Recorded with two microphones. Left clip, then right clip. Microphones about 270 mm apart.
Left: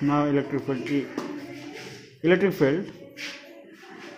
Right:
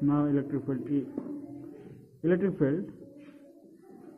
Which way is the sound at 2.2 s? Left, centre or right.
Centre.